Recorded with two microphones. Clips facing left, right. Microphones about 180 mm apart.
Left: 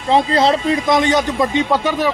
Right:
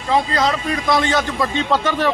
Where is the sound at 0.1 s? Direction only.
30° left (ahead or behind).